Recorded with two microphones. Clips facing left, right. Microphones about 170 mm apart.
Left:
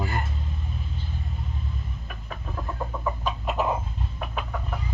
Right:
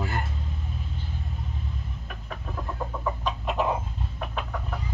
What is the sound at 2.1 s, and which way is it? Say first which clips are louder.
Chicken: right 1 dB; 5° left (ahead or behind).